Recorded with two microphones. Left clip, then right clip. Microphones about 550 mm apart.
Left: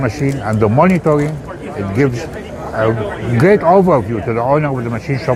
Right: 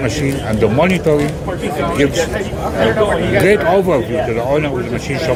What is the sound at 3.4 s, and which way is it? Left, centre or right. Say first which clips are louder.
A man's voice: left 5 dB; left.